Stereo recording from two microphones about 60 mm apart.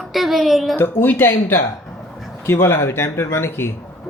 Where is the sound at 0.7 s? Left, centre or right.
Left.